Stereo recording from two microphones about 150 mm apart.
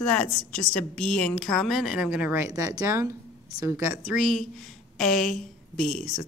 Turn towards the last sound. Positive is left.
turn(degrees=0)  # may be behind; listen again after turning